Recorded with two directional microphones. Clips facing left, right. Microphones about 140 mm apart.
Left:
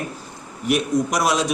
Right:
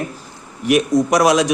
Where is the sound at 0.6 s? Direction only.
90° right.